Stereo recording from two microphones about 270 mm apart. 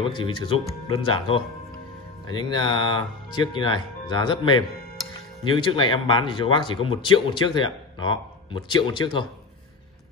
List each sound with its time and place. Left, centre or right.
0.0 s speech: centre